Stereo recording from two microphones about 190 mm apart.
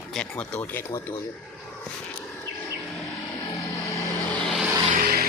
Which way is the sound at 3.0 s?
20° left (ahead or behind).